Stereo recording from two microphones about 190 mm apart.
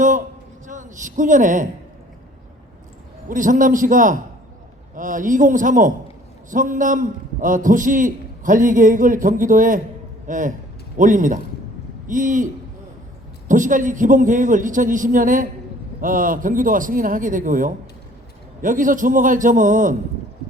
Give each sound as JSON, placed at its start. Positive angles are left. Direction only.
{"t": 0.7, "sound": "a man's voice", "side_deg": -40}
{"t": 3.2, "sound": "a man's voice", "side_deg": -45}
{"t": 13.5, "sound": "a man's voice", "side_deg": -40}